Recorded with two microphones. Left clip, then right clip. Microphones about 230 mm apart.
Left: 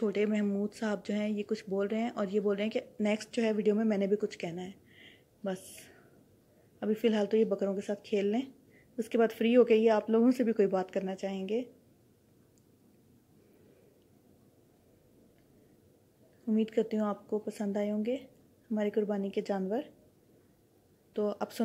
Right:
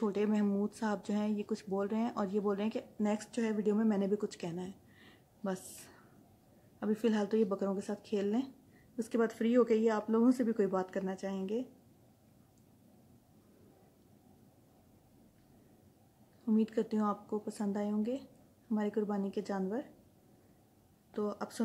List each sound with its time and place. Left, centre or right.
0.0 s a woman's voice: centre
16.4 s speech: centre
21.1 s speech: centre